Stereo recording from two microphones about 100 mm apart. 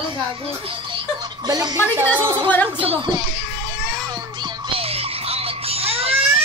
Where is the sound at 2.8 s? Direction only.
55° right (ahead or behind).